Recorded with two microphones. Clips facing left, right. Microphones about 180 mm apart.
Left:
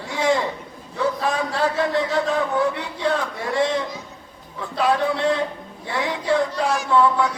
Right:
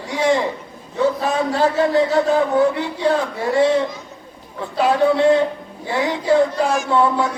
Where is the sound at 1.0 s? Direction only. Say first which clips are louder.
Right 4 dB; 30° right (ahead or behind).